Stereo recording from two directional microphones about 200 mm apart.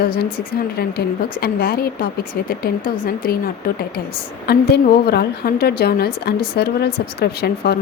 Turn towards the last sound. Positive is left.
turn(degrees=55)  # may be behind; listen again after turning